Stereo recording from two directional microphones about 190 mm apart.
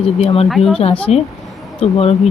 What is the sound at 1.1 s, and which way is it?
A woman's voice, 35° left (ahead or behind).